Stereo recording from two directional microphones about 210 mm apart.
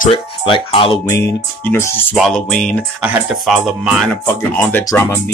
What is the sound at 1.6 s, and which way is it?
Speech, 10° left (ahead or behind).